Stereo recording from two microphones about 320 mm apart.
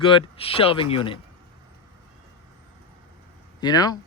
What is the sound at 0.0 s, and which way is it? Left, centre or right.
Speech, centre.